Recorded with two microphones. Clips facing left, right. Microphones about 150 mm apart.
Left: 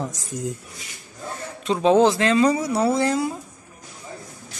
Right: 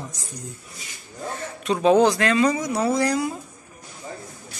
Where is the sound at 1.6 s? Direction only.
25° left (ahead or behind).